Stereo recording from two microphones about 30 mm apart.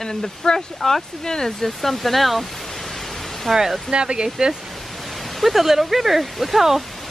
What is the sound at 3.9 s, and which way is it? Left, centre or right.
Speech, right.